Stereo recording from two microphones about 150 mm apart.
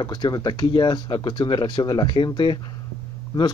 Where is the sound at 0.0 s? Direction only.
30° left (ahead or behind).